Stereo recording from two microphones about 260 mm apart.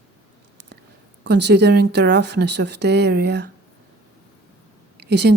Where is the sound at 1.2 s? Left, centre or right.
Right.